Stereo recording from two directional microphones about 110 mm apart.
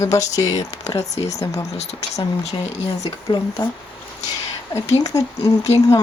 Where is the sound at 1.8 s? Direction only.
75° left (ahead or behind).